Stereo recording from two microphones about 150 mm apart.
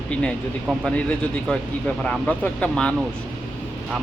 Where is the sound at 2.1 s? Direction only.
10° left (ahead or behind).